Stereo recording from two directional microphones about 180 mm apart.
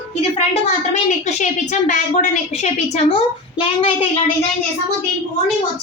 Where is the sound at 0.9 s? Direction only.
40° left (ahead or behind).